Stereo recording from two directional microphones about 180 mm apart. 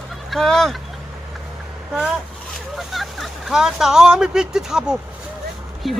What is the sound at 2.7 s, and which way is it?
Speech, centre (ahead or behind).